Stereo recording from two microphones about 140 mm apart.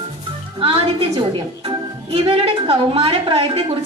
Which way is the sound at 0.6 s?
40° right (ahead or behind).